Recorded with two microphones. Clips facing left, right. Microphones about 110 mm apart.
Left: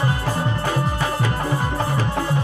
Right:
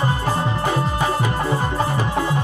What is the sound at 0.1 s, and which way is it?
Music, 20° right (ahead or behind).